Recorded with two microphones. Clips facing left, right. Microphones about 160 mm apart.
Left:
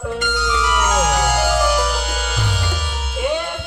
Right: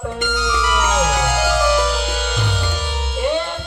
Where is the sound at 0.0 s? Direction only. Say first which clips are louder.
Even; centre (ahead or behind).